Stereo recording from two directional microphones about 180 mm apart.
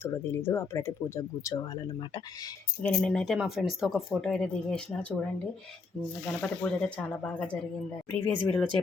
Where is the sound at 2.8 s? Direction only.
5° left (ahead or behind).